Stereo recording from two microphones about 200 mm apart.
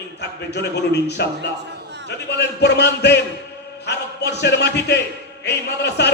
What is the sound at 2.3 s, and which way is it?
A man's voice, 60° left (ahead or behind).